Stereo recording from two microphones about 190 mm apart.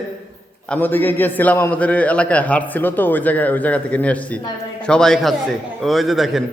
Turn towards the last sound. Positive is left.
turn(degrees=0)  # may be behind; listen again after turning